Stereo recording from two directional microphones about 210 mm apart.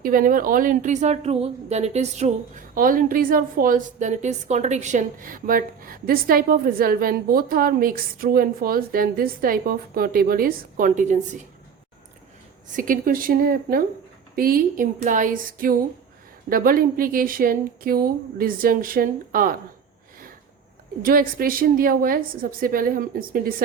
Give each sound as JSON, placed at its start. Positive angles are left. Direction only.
{"t": 0.0, "sound": "a woman's voice", "side_deg": -40}
{"t": 12.7, "sound": "a woman's voice", "side_deg": -40}
{"t": 21.0, "sound": "a woman's voice", "side_deg": -45}